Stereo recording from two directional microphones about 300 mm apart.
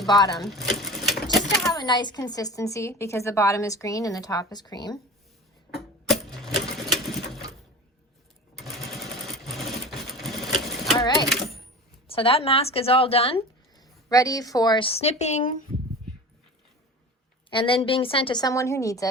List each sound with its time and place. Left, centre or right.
0.1 s speech: centre
0.3 s sewing machine: centre
1.6 s speech: centre
5.7 s a sound: centre
8.5 s sewing machine: centre
10.9 s a sound: centre
12.0 s speech: centre
17.5 s speech: centre